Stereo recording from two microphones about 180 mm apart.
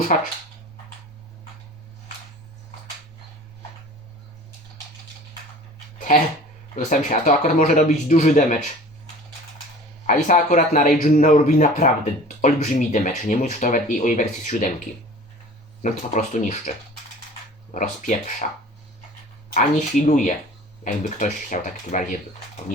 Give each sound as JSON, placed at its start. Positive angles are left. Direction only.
{"t": 0.1, "sound": "speech", "side_deg": 45}
{"t": 6.7, "sound": "speech", "side_deg": 45}
{"t": 10.1, "sound": "speech", "side_deg": 45}
{"t": 15.8, "sound": "speech", "side_deg": 45}
{"t": 17.7, "sound": "speech", "side_deg": 45}
{"t": 19.5, "sound": "speech", "side_deg": 45}